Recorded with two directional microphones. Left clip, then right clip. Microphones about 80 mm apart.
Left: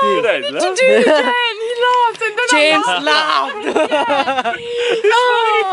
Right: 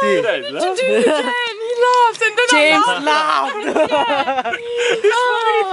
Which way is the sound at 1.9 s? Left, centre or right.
Right.